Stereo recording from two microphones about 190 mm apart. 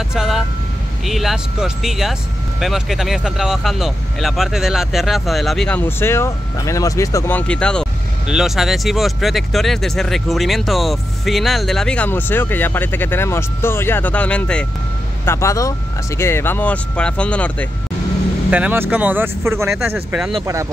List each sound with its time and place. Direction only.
0.1 s speech: 5° right (ahead or behind)
18.5 s speech: 10° right (ahead or behind)